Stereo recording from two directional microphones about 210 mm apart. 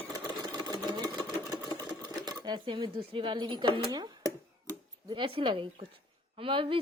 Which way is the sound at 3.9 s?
20° right (ahead or behind).